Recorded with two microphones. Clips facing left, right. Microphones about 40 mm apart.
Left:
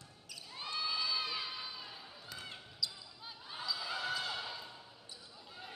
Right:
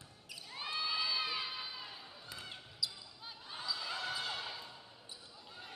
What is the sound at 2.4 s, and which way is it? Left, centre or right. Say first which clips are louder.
Basketball bounce: even; centre.